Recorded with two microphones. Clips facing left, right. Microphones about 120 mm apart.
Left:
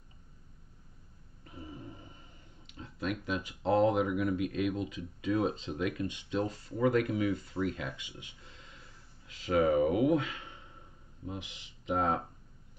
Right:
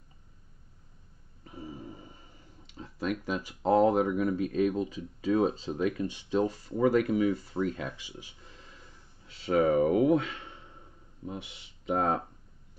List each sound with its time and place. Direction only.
1.6 s a sound: 10° right (ahead or behind)
2.8 s speech: 40° right (ahead or behind)
9.4 s speech: 30° right (ahead or behind)
11.8 s speech: 40° right (ahead or behind)